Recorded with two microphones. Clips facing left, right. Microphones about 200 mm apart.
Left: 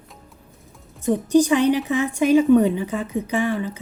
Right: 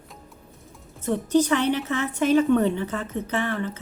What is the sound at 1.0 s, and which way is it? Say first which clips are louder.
A woman's voice: left 4 dB; 15° left (ahead or behind).